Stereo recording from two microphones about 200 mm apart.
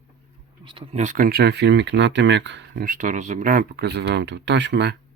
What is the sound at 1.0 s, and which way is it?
Speech, 40° right (ahead or behind).